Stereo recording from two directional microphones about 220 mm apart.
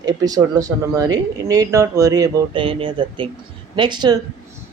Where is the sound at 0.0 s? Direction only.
15° right (ahead or behind).